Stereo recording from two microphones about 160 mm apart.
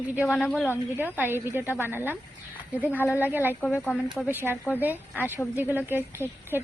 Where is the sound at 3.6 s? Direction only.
10° left (ahead or behind).